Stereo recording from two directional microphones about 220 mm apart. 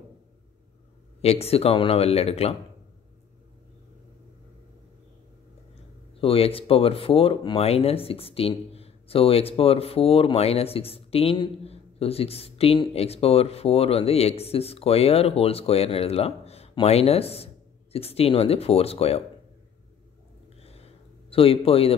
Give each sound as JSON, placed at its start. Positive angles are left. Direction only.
{"t": 1.2, "sound": "speech", "side_deg": 30}
{"t": 6.2, "sound": "speech", "side_deg": 25}
{"t": 20.6, "sound": "a sound", "side_deg": 25}